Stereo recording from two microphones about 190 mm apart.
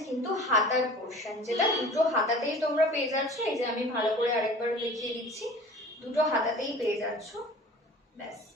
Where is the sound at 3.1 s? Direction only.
15° right (ahead or behind).